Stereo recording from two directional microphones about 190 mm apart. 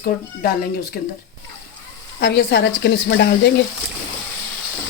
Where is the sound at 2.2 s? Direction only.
60° left (ahead or behind).